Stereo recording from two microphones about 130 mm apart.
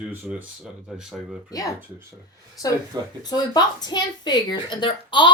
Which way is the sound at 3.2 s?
30° left (ahead or behind).